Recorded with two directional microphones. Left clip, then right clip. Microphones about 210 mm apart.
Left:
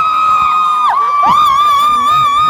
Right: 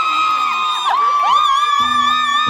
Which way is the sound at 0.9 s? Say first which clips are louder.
Left 4 dB; 40° left (ahead or behind).